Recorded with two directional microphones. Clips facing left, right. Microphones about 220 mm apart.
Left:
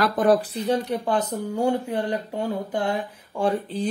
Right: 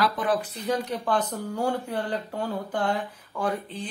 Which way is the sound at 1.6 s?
20° left (ahead or behind).